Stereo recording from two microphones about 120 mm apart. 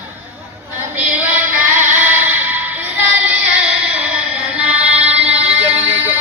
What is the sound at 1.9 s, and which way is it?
Music, 15° right (ahead or behind).